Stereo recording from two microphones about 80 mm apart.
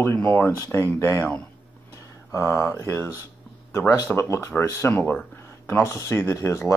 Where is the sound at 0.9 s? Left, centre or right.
Left.